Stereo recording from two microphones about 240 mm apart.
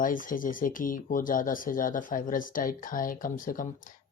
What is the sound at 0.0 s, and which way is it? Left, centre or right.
Speech, left.